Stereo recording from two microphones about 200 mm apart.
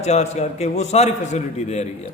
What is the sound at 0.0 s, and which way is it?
A man's voice, 35° left (ahead or behind).